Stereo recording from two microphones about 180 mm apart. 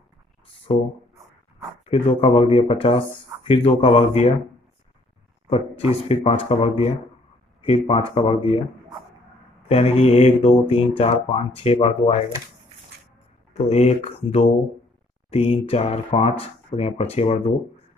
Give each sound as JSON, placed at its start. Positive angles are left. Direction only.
{"t": 0.7, "sound": "speech", "side_deg": 30}
{"t": 1.9, "sound": "speech", "side_deg": 35}
{"t": 5.5, "sound": "speech", "side_deg": 35}
{"t": 9.7, "sound": "speech", "side_deg": 35}
{"t": 12.9, "sound": "squish", "side_deg": -65}
{"t": 13.5, "sound": "speech", "side_deg": 35}